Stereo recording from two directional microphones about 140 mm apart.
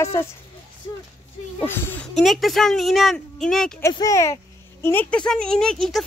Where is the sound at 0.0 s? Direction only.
20° left (ahead or behind).